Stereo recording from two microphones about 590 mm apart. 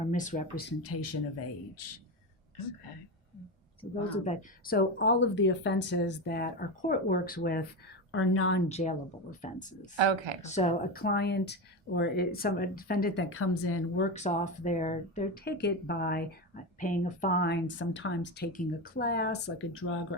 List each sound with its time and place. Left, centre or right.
0.1 s speech: centre
4.1 s speech: centre
10.0 s speech: right
10.4 s speech: centre
14.1 s speech: centre